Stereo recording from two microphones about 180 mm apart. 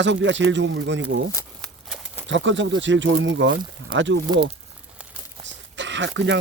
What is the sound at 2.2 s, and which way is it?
Speech, 90° right.